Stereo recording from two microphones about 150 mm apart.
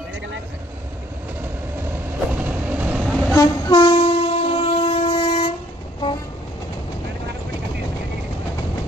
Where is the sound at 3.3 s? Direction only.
30° left (ahead or behind).